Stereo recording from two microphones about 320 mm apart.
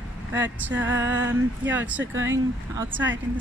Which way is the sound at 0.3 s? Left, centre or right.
Centre.